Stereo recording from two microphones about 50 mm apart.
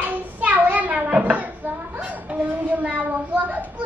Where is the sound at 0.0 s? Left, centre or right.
Right.